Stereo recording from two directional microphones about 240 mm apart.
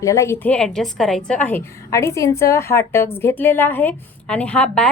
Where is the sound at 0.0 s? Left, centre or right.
Centre.